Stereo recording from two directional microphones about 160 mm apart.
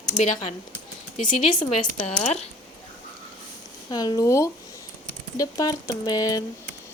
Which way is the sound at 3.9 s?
25° left (ahead or behind).